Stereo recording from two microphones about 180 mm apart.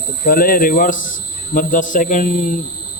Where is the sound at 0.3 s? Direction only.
55° left (ahead or behind).